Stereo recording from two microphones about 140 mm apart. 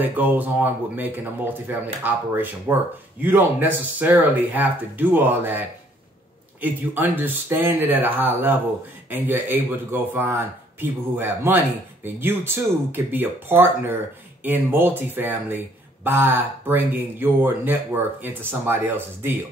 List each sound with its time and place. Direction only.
0.0 s speech: 10° right (ahead or behind)